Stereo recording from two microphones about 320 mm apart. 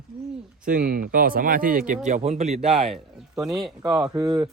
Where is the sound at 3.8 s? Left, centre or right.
Centre.